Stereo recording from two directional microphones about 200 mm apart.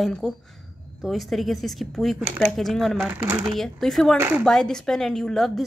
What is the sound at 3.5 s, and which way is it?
Speech, centre (ahead or behind).